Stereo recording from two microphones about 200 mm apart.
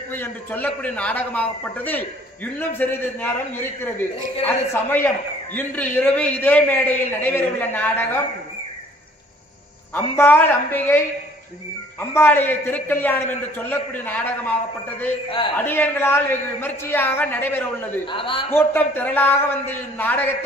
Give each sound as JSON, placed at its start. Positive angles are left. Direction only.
{"t": 0.1, "sound": "a man's voice", "side_deg": 10}
{"t": 4.5, "sound": "a man's voice", "side_deg": 10}
{"t": 9.9, "sound": "a man's voice", "side_deg": 10}
{"t": 12.0, "sound": "a man's voice", "side_deg": 10}
{"t": 15.2, "sound": "a man's voice", "side_deg": 25}
{"t": 15.5, "sound": "a man's voice", "side_deg": 10}
{"t": 18.0, "sound": "a man's voice", "side_deg": 25}
{"t": 18.5, "sound": "a man's voice", "side_deg": 10}